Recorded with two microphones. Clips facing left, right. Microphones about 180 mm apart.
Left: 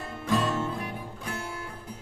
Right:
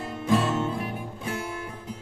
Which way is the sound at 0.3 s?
20° right (ahead or behind).